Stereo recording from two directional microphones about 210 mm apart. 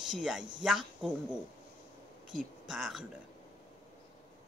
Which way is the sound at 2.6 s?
Centre (ahead or behind).